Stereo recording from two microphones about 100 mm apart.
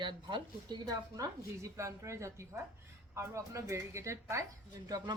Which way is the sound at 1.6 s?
30° right (ahead or behind).